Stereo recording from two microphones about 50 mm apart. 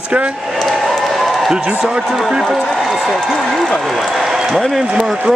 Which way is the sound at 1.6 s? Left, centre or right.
Centre.